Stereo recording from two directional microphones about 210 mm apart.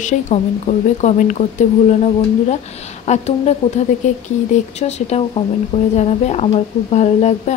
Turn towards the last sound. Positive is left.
turn(degrees=30)  # may be behind; listen again after turning